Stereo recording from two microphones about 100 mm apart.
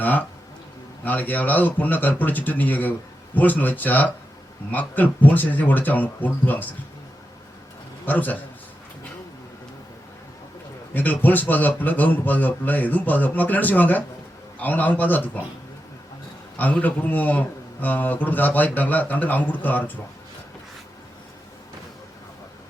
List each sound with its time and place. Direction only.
0.0 s a man's voice: 15° left (ahead or behind)
8.0 s a man's voice: 15° left (ahead or behind)
10.9 s a man's voice: 20° left (ahead or behind)
16.6 s a man's voice: 15° left (ahead or behind)